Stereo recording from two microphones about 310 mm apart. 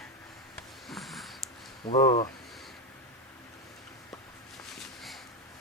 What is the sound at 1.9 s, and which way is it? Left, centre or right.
Speech, centre.